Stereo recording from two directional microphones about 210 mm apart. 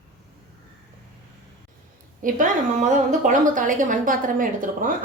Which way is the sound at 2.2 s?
40° right (ahead or behind).